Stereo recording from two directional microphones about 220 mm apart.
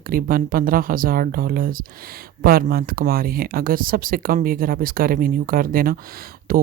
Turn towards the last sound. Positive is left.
turn(degrees=-40)  # may be behind; listen again after turning